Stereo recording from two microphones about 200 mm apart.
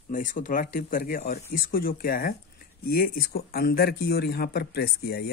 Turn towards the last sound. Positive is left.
turn(degrees=50)  # may be behind; listen again after turning